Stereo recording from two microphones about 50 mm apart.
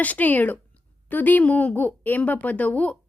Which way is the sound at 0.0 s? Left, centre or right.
Left.